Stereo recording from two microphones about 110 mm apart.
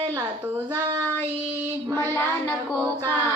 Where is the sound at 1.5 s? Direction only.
25° right (ahead or behind).